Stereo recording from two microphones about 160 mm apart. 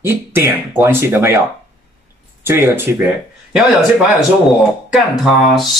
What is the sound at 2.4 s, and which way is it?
Speech, 15° right (ahead or behind).